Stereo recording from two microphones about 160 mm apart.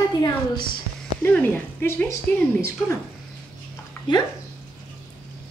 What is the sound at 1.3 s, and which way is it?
Speech, 10° left (ahead or behind).